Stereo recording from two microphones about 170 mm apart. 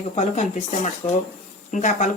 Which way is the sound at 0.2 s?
45° left (ahead or behind).